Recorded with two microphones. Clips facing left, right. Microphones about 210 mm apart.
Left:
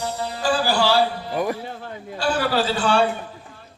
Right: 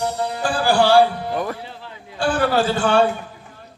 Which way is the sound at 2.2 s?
50° right (ahead or behind).